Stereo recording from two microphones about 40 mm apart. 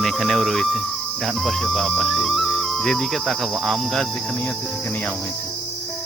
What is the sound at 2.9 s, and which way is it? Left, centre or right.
Cricket, centre.